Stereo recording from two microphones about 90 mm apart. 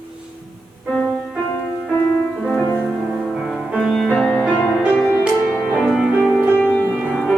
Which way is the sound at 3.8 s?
Centre (ahead or behind).